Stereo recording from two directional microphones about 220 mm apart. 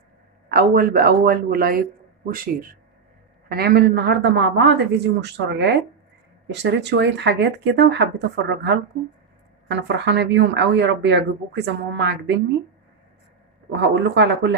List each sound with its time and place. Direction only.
0.5 s speech: 45° right (ahead or behind)
3.4 s speech: 45° right (ahead or behind)
13.7 s speech: 50° right (ahead or behind)